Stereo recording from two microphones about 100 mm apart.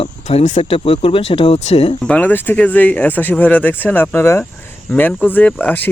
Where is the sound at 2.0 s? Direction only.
15° left (ahead or behind).